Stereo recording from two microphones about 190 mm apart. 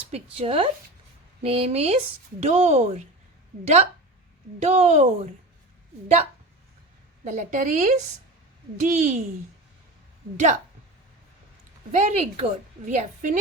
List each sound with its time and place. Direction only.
0.1 s a woman's voice: 30° right (ahead or behind)
4.6 s a woman's voice: 35° right (ahead or behind)
7.3 s a woman's voice: 40° right (ahead or behind)
10.3 s a woman's voice: 40° right (ahead or behind)
11.9 s a woman's voice: 35° right (ahead or behind)